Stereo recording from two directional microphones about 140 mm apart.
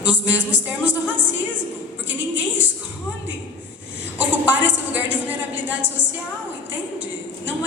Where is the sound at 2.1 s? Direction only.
10° right (ahead or behind).